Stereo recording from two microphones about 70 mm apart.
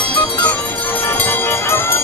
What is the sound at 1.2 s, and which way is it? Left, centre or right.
Music, left.